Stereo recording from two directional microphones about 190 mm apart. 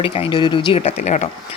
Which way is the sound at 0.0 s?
30° left (ahead or behind).